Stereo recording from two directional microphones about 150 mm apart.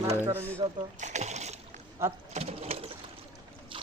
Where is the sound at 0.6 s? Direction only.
50° right (ahead or behind).